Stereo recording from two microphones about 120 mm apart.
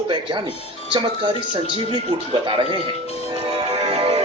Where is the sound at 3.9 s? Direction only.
50° right (ahead or behind).